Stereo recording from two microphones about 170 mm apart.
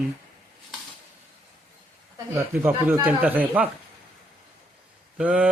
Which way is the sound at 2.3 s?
15° right (ahead or behind).